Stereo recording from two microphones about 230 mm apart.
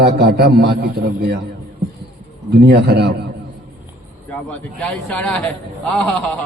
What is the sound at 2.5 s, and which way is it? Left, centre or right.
Speech, right.